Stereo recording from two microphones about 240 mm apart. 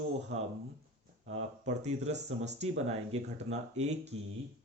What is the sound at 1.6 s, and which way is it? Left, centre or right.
Speech, right.